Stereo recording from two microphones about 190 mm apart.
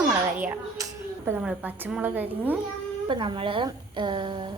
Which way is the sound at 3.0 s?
25° right (ahead or behind).